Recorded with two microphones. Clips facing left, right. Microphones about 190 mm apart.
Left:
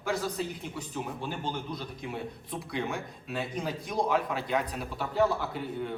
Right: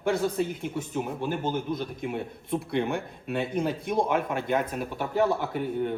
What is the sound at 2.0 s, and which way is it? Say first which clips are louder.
A man's voice: right 5 dB; 55° right (ahead or behind).